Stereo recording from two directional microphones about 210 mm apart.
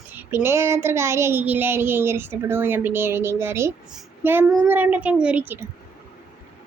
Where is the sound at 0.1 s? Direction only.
10° right (ahead or behind).